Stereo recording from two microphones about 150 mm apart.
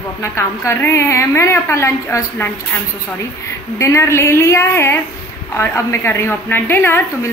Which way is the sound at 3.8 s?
20° left (ahead or behind).